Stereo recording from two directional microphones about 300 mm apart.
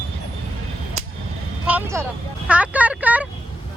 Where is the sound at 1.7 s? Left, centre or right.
Centre.